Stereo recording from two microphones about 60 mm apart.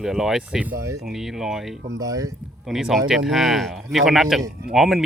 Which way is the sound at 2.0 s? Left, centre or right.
Right.